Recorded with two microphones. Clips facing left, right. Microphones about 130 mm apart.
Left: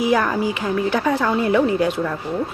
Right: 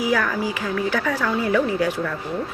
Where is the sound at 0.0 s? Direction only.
20° left (ahead or behind).